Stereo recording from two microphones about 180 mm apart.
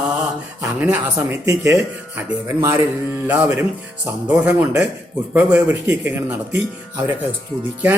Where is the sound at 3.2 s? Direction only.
10° right (ahead or behind).